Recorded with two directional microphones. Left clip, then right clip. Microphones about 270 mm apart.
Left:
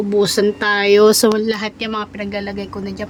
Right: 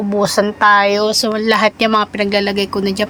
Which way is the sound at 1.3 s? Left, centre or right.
Centre.